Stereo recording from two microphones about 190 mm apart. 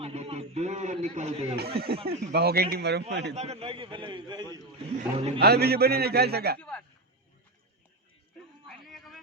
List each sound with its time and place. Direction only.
0.0 s a man's voice: 35° right (ahead or behind)
2.0 s a man's voice: 55° right (ahead or behind)
3.3 s a man's voice: 35° right (ahead or behind)
5.4 s a man's voice: 55° right (ahead or behind)
6.6 s a man's voice: 5° left (ahead or behind)
8.6 s music: centre (ahead or behind)